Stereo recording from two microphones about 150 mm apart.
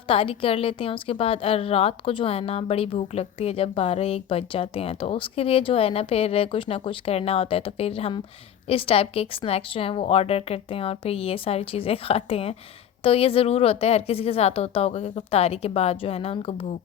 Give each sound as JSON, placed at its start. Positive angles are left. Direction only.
{"t": 0.1, "sound": "a woman's voice", "side_deg": 40}